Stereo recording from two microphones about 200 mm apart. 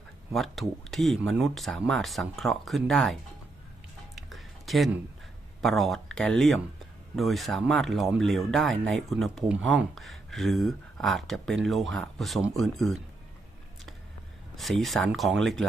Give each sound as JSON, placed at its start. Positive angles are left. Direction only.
{"t": 0.3, "sound": "speech", "side_deg": 0}
{"t": 4.1, "sound": "music", "side_deg": 0}
{"t": 5.6, "sound": "speech", "side_deg": 0}
{"t": 14.5, "sound": "speech", "side_deg": 0}